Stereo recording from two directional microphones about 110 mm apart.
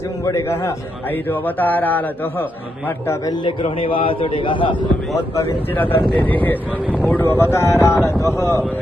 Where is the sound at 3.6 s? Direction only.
60° left (ahead or behind).